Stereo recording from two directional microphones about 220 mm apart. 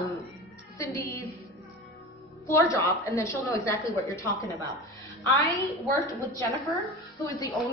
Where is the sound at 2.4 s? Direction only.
15° left (ahead or behind).